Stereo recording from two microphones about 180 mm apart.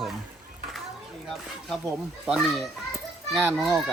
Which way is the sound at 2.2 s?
Centre (ahead or behind).